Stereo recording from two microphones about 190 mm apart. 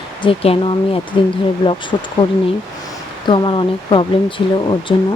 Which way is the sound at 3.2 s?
25° left (ahead or behind).